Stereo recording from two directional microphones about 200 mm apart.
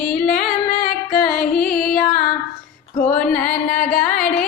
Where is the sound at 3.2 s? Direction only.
5° left (ahead or behind).